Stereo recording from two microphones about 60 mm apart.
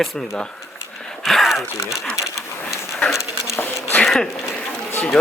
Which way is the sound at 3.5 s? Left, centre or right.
Left.